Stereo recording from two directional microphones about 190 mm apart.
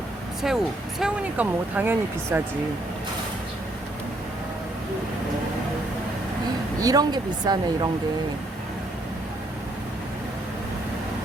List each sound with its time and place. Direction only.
0.4 s speech: centre (ahead or behind)
6.7 s speech: 20° right (ahead or behind)